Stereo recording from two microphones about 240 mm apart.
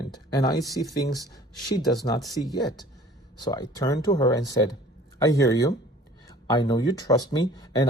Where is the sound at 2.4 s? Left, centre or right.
Centre.